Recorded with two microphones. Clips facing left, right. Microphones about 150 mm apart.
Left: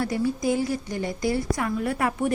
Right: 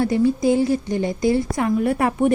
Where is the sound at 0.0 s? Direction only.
25° right (ahead or behind).